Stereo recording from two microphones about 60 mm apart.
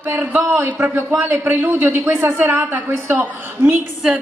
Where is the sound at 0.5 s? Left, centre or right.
Right.